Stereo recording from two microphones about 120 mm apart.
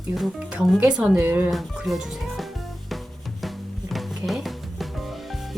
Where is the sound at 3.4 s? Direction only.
Centre (ahead or behind).